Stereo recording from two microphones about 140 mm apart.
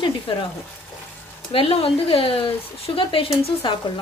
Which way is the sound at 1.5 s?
40° left (ahead or behind).